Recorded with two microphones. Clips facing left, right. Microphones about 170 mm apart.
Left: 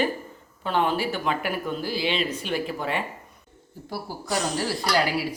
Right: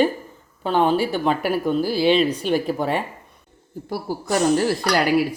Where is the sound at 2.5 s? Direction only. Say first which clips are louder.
Right 6 dB; 40° right (ahead or behind).